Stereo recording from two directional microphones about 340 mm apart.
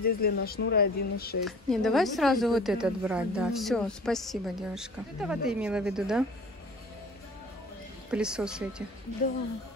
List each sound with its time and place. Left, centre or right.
0.0 s speech: left
1.4 s a woman's voice: centre
8.1 s a woman's voice: centre